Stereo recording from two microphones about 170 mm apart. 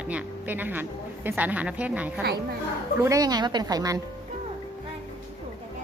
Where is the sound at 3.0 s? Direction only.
20° right (ahead or behind).